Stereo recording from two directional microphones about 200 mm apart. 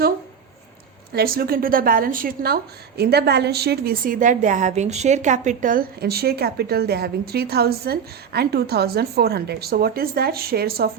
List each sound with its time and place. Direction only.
1.1 s a woman's voice: 50° right (ahead or behind)